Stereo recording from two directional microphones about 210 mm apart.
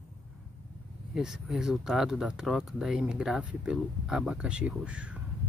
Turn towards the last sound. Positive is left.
turn(degrees=-5)  # may be behind; listen again after turning